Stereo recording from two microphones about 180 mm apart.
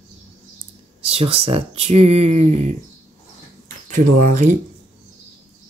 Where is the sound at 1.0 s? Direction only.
30° right (ahead or behind).